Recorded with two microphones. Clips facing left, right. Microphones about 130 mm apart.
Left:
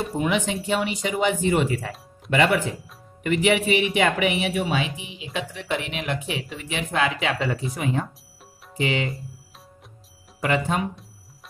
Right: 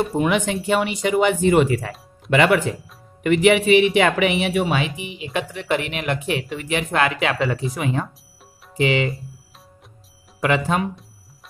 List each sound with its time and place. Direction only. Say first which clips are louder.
0.0 s speech: right 4 dB; 60° right (ahead or behind)
7.7 s speech: right 2 dB; 90° right
10.4 s speech: right 3 dB; 80° right